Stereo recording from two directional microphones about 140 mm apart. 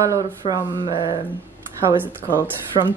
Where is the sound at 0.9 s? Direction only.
35° left (ahead or behind).